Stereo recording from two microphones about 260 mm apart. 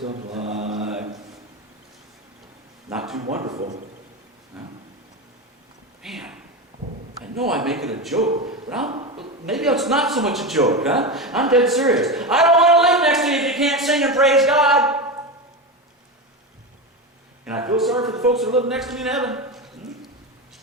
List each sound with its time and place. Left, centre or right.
0.0 s mantra: right
3.5 s a man's voice: right
4.5 s a man's voice: centre
6.0 s a sound: centre
7.3 s a man's voice: centre
8.9 s a sound: right
9.5 s a man's voice: centre
17.4 s speech: centre